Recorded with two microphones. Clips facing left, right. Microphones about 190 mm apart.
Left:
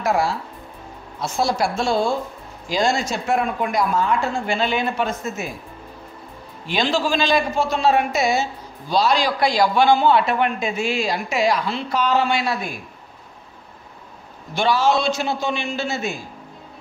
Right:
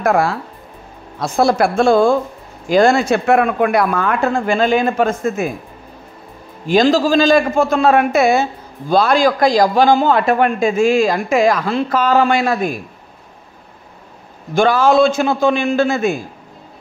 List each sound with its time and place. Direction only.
0.0 s speech: 55° right (ahead or behind)
6.7 s a man's voice: 40° right (ahead or behind)
14.5 s a man's voice: 50° right (ahead or behind)